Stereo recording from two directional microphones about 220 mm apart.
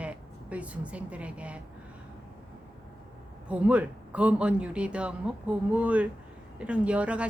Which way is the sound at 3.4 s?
5° right (ahead or behind).